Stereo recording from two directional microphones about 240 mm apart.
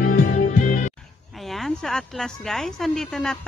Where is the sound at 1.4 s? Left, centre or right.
Centre.